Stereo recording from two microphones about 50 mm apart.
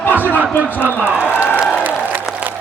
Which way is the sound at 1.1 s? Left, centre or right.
Right.